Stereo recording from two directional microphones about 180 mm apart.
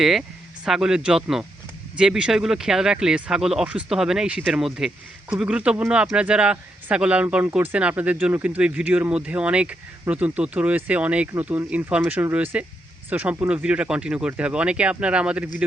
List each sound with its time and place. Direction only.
0.0 s speech: centre (ahead or behind)